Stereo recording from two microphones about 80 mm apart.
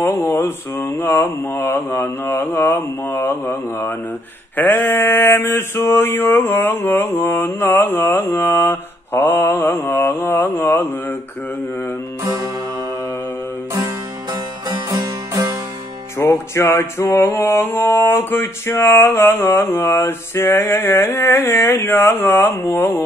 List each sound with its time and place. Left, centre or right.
0.0 s music: left
4.6 s male singing: left
14.7 s music: right
16.2 s music: left
20.5 s male singing: left